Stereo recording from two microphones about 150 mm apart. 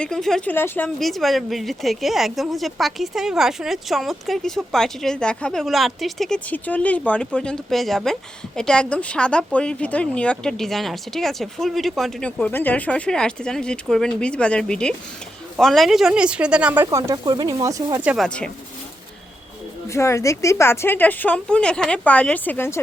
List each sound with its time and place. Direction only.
0.0 s speech: 5° left (ahead or behind)
0.5 s a woman's voice: 15° left (ahead or behind)
0.9 s speech: centre (ahead or behind)
12.4 s speech: 10° left (ahead or behind); by 16.8 s 10° right (ahead or behind)
16.8 s speech: 25° right (ahead or behind)
18.0 s speech: 10° right (ahead or behind)
18.3 s a woman's voice: 5° left (ahead or behind)
19.9 s a woman's voice: 20° left (ahead or behind)